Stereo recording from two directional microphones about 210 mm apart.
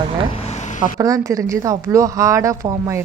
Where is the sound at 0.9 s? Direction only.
15° right (ahead or behind).